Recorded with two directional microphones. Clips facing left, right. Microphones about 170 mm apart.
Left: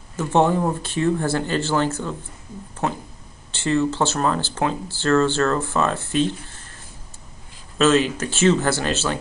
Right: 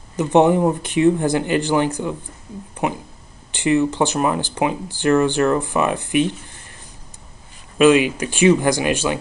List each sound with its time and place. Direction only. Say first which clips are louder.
0.1 s speech: right 4 dB; 15° right (ahead or behind)
7.7 s speech: right 4 dB; 15° right (ahead or behind)